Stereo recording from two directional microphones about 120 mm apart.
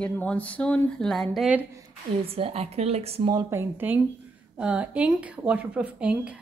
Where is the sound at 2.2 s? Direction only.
55° right (ahead or behind).